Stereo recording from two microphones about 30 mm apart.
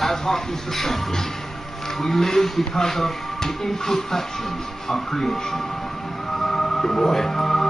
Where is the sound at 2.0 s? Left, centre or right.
Centre.